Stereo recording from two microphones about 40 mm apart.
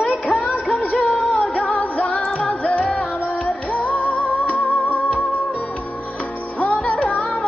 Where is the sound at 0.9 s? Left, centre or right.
Left.